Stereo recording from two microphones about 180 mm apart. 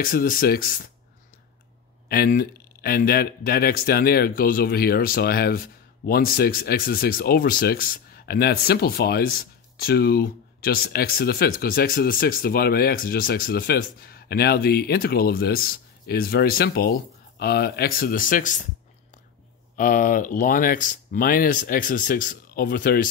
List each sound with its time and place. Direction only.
0.0 s speech: 50° left (ahead or behind)
2.0 s speech: 55° left (ahead or behind)
19.8 s speech: 50° left (ahead or behind)